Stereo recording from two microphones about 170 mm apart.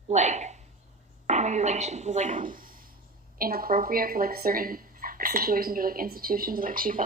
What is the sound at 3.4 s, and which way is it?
Speech, 60° right (ahead or behind).